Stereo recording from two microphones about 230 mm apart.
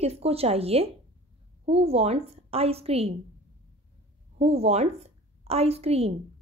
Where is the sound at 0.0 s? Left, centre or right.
Right.